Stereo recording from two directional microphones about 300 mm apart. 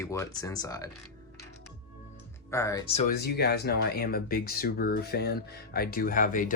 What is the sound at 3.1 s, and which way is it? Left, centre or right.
Speech, left.